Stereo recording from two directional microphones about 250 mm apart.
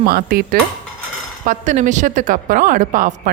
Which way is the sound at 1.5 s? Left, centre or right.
Right.